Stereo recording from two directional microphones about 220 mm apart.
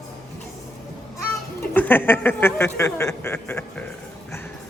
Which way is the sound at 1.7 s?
10° left (ahead or behind).